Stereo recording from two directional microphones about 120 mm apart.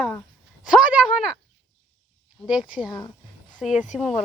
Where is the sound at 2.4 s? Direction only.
10° right (ahead or behind).